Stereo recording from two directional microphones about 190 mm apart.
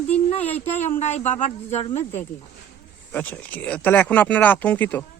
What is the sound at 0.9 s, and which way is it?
Speech, 35° left (ahead or behind).